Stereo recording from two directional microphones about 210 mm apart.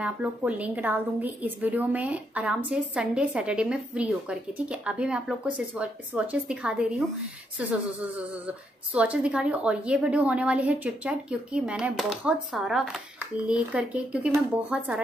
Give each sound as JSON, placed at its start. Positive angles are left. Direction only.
{"t": 0.0, "sound": "a woman's voice", "side_deg": -5}
{"t": 8.5, "sound": "a woman's voice", "side_deg": -5}